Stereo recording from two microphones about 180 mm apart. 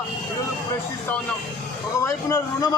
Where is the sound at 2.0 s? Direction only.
20° left (ahead or behind).